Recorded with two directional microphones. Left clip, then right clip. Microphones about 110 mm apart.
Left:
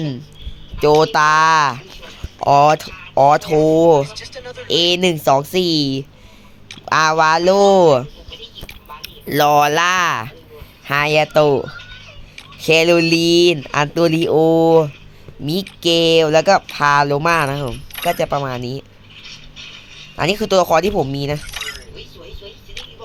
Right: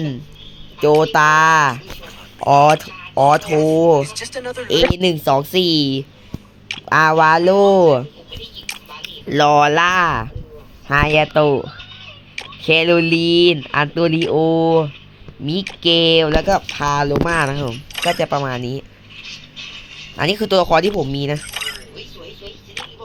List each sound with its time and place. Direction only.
0.8 s speech: 10° left (ahead or behind)
5.1 s a woman's voice: 25° left (ahead or behind)
6.7 s speech: 5° left (ahead or behind)
8.6 s a sound: 5° left (ahead or behind)
9.3 s speech: 10° left (ahead or behind)
11.3 s a woman's voice: 25° left (ahead or behind)
12.6 s speech: 35° left (ahead or behind)
13.4 s a woman's voice: 20° left (ahead or behind)
16.3 s speech: 10° left (ahead or behind)
16.8 s speech: 25° left (ahead or behind); by 18.9 s 5° left (ahead or behind)
20.1 s speech: 10° left (ahead or behind)
22.8 s music: 15° left (ahead or behind)